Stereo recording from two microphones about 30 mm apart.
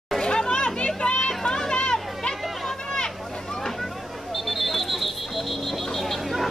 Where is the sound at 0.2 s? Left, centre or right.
Left.